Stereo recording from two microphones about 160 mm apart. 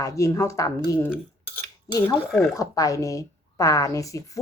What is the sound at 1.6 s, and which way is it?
Cutlery, 15° left (ahead or behind).